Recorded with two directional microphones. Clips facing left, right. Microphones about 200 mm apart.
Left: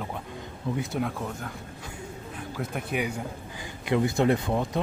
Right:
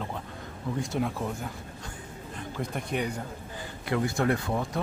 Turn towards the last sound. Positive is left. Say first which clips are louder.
# left 3 dB
turn(degrees=20)  # may be behind; listen again after turning